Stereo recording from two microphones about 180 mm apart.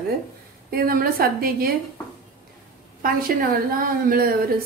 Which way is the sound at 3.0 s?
50° right (ahead or behind).